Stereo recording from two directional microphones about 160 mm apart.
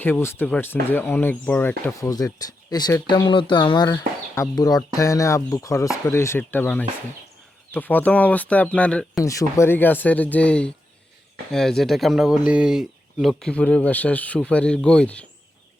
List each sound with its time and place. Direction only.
0.0 s speech: 15° left (ahead or behind)
9.2 s speech: 20° left (ahead or behind)